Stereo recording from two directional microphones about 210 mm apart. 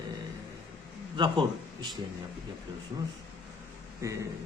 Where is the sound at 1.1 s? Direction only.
20° right (ahead or behind).